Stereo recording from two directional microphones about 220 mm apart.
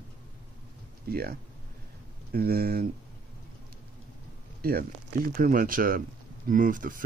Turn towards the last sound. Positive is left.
turn(degrees=-40)  # may be behind; listen again after turning